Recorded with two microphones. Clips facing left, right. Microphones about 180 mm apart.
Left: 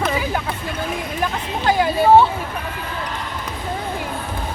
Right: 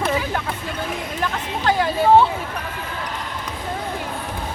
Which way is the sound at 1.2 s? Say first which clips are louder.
Left 1 dB; 10° left (ahead or behind).